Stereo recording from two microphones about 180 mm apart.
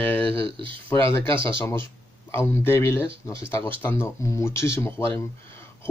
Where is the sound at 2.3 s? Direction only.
15° left (ahead or behind).